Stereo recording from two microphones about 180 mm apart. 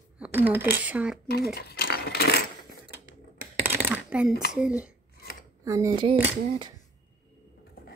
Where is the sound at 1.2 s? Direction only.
60° left (ahead or behind).